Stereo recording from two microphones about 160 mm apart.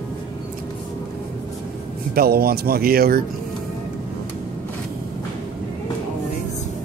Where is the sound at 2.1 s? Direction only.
70° right (ahead or behind).